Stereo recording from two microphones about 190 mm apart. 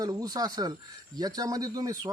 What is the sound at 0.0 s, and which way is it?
A man's voice, 20° right (ahead or behind).